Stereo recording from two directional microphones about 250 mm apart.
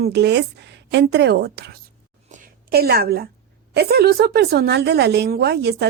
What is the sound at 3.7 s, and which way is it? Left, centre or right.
A woman's voice, right.